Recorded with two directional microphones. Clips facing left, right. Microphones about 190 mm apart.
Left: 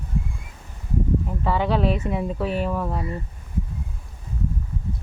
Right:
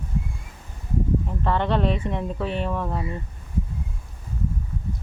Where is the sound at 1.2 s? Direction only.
5° left (ahead or behind).